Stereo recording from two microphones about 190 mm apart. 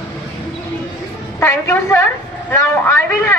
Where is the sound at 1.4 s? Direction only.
15° left (ahead or behind).